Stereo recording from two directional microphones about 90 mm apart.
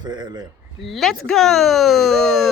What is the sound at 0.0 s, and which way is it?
Speech, 50° right (ahead or behind).